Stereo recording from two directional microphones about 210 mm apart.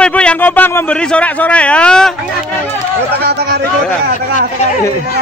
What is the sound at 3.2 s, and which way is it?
Speech, 50° right (ahead or behind).